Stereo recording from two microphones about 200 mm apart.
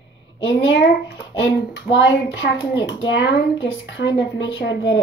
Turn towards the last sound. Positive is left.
turn(degrees=65)  # may be behind; listen again after turning